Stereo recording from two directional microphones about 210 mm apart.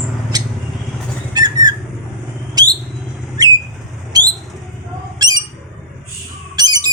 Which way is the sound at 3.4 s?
20° right (ahead or behind).